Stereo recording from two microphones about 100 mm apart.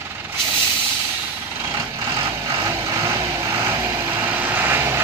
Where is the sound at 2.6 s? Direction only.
30° right (ahead or behind).